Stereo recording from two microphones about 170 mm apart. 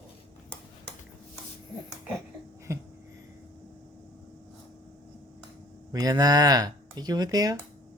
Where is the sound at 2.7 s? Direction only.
15° right (ahead or behind).